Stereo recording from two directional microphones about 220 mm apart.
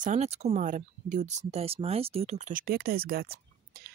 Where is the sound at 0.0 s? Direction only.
30° right (ahead or behind).